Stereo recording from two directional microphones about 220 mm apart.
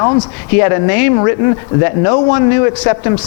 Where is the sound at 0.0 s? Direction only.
15° left (ahead or behind).